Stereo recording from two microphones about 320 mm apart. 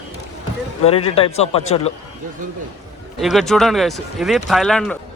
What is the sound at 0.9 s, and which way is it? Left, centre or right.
A man's voice, centre.